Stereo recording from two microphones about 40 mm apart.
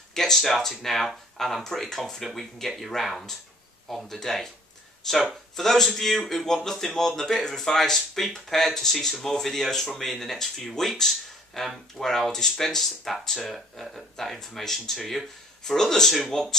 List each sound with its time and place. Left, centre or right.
0.1 s speech: centre